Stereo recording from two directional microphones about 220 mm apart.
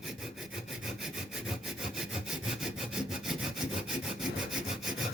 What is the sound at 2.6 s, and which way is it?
Sawing, centre (ahead or behind).